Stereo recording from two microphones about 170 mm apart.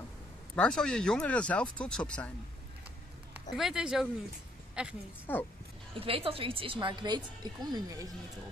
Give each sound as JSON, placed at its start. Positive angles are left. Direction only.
{"t": 0.6, "sound": "speech", "side_deg": 5}
{"t": 3.5, "sound": "a woman's voice", "side_deg": -5}
{"t": 5.2, "sound": "a woman's voice", "side_deg": 10}
{"t": 5.9, "sound": "a woman's voice", "side_deg": -35}